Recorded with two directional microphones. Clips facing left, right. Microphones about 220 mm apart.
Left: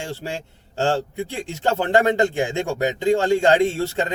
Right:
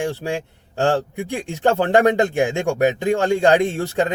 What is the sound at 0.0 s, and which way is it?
A man's voice, 15° right (ahead or behind).